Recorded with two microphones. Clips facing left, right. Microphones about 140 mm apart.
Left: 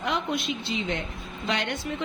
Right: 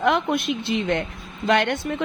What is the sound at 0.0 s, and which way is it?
A woman's voice, 55° right (ahead or behind).